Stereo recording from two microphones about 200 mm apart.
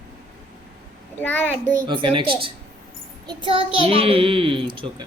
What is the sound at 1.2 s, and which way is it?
Child singing, 10° left (ahead or behind).